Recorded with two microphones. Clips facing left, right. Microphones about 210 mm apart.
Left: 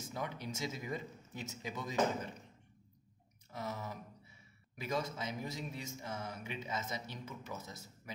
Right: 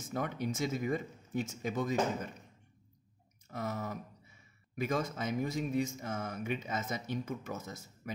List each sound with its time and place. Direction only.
0.0 s speech: 50° right (ahead or behind)
3.4 s speech: 50° right (ahead or behind)